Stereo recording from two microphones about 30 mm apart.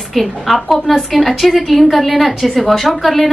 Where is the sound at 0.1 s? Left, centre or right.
Centre.